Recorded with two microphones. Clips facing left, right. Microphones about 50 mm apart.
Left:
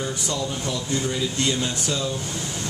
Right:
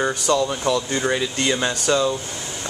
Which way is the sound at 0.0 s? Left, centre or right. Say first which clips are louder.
Right 8 dB; right.